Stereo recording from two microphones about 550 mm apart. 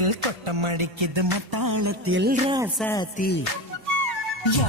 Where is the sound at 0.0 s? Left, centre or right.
Right.